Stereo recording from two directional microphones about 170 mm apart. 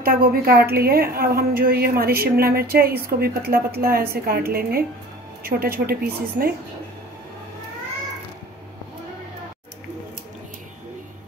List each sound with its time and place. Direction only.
0.0 s a woman's voice: 60° right (ahead or behind)